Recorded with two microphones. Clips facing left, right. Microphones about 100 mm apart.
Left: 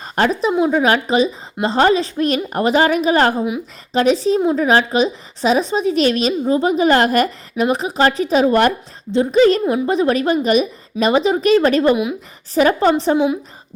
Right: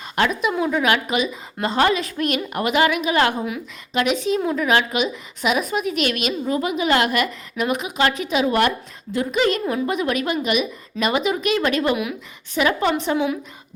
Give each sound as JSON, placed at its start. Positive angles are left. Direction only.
{"t": 0.0, "sound": "a woman's voice", "side_deg": 35}